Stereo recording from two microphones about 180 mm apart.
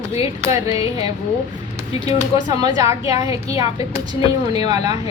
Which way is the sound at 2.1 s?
20° right (ahead or behind).